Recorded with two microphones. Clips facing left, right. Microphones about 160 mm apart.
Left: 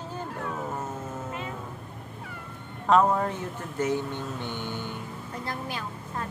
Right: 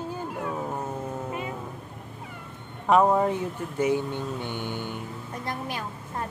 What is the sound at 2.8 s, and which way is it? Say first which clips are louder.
A woman's voice: right 2 dB; 10° right (ahead or behind).